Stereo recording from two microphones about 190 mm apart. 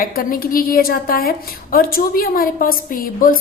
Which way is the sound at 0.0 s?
50° left (ahead or behind).